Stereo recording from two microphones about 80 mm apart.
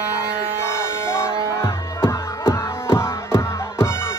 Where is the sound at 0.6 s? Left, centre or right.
Left.